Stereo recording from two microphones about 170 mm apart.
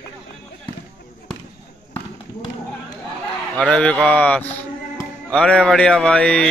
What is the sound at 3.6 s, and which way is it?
Speech, 5° left (ahead or behind).